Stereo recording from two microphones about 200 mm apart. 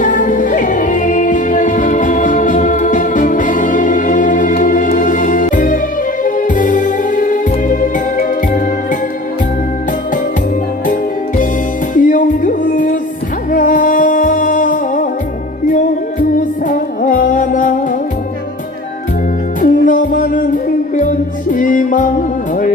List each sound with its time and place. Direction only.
0.0 s music: 40° left (ahead or behind)
11.9 s music: 40° left (ahead or behind)
16.3 s music: 40° left (ahead or behind)
19.6 s music: 40° left (ahead or behind)